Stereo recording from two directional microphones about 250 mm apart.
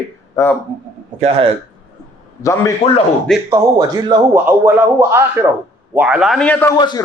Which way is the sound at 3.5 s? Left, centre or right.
Centre.